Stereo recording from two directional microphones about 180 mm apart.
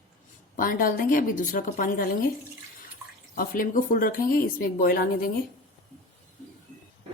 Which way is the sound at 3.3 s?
50° left (ahead or behind).